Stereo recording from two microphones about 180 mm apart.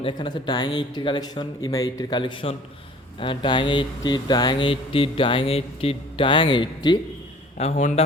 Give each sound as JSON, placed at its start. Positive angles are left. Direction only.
{"t": 0.0, "sound": "speech", "side_deg": 25}
{"t": 7.6, "sound": "a man's voice", "side_deg": 40}